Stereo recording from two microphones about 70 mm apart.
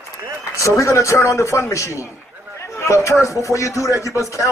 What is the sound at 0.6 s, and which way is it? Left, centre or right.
A man's voice, left.